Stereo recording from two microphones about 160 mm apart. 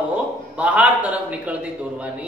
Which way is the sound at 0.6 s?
10° right (ahead or behind).